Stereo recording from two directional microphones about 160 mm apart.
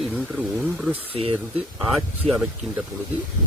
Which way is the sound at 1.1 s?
35° right (ahead or behind).